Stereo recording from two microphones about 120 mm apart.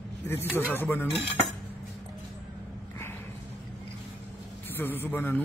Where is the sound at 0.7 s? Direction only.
20° left (ahead or behind).